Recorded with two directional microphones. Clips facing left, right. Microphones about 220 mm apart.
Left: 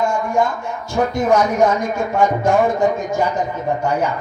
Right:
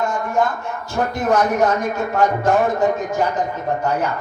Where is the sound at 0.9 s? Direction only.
10° left (ahead or behind).